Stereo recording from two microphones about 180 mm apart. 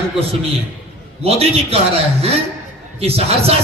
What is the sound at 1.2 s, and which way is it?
Speech, 35° right (ahead or behind).